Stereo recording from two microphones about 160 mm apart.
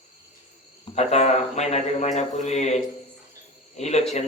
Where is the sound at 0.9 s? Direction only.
45° left (ahead or behind).